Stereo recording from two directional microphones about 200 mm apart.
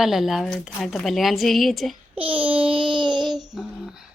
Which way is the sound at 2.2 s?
10° right (ahead or behind).